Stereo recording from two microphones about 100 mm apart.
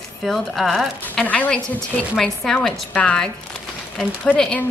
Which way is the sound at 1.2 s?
15° left (ahead or behind).